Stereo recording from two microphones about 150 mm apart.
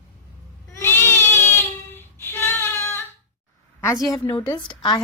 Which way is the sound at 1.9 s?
15° left (ahead or behind).